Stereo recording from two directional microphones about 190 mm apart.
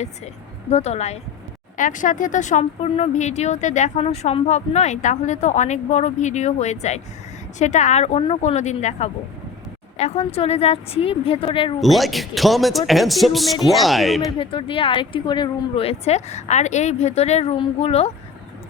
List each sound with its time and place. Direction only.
0.7 s speech: 35° left (ahead or behind)
11.8 s speech: centre (ahead or behind)
14.3 s speech: 25° left (ahead or behind)